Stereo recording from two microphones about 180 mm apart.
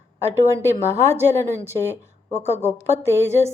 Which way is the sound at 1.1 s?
15° right (ahead or behind).